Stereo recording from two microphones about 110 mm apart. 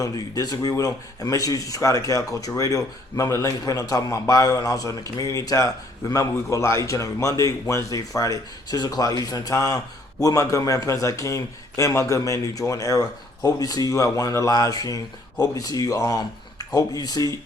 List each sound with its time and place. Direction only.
0.0 s speech: 35° left (ahead or behind)